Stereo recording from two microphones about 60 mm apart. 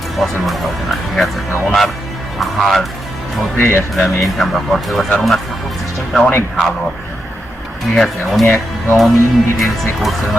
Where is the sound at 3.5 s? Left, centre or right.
Left.